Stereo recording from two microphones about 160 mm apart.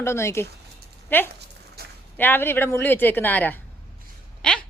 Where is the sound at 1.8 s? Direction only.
80° right.